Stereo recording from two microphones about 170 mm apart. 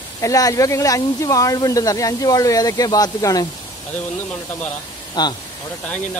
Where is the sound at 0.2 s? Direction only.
20° left (ahead or behind).